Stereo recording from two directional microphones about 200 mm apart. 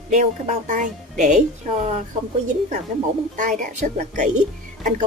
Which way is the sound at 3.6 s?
40° right (ahead or behind).